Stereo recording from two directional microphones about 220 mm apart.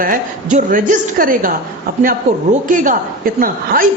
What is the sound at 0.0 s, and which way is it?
A man's voice, 40° right (ahead or behind).